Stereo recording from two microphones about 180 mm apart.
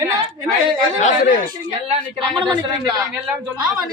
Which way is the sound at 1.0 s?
45° left (ahead or behind).